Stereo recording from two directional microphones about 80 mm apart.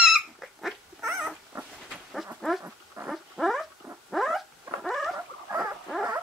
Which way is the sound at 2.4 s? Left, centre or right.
Centre.